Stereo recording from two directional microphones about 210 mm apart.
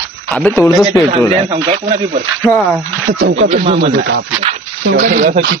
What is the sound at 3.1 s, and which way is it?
Speech, 45° right (ahead or behind).